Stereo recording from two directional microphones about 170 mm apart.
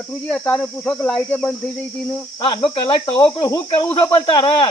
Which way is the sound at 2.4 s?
30° left (ahead or behind).